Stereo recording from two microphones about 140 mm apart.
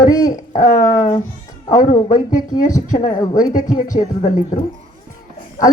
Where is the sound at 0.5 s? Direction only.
60° left (ahead or behind).